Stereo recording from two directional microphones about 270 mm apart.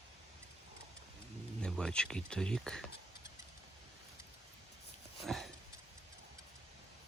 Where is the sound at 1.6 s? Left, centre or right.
Centre.